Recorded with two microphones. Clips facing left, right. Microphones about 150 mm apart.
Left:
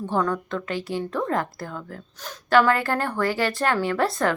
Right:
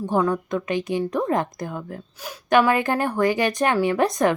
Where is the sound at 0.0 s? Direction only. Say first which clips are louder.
Right 3 dB; 10° right (ahead or behind).